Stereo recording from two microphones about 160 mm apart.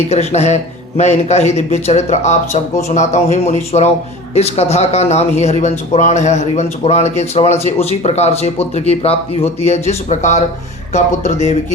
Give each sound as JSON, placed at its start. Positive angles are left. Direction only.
{"t": 0.1, "sound": "speech", "side_deg": 45}